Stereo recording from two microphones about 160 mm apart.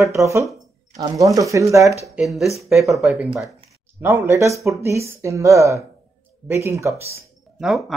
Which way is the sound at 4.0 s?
15° right (ahead or behind).